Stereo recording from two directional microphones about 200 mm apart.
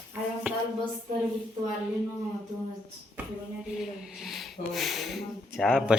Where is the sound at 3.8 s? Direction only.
Centre (ahead or behind).